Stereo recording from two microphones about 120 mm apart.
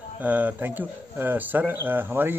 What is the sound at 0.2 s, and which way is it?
Speech, 15° right (ahead or behind).